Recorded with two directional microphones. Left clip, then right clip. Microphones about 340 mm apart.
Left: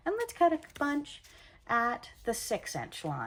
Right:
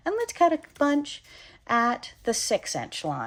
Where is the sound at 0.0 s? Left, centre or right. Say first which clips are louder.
Right 5 dB; centre.